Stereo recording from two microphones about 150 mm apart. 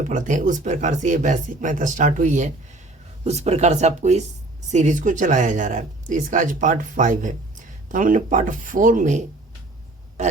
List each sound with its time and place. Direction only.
0.0 s speech: 55° right (ahead or behind)
3.2 s speech: 45° right (ahead or behind)